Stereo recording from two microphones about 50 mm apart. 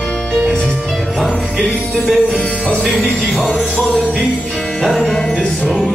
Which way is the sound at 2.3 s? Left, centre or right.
Centre.